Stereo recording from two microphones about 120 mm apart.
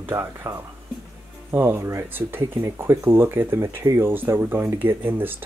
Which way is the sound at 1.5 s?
20° right (ahead or behind).